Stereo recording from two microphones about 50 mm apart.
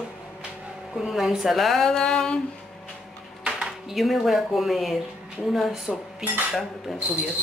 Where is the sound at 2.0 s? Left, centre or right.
Centre.